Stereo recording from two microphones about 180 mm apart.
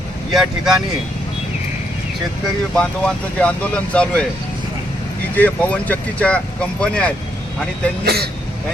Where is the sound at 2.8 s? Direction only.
5° left (ahead or behind).